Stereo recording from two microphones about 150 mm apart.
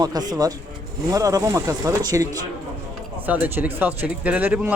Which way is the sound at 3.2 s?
10° right (ahead or behind).